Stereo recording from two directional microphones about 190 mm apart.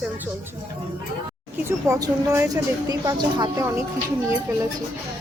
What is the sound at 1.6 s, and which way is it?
A woman's voice, 15° right (ahead or behind).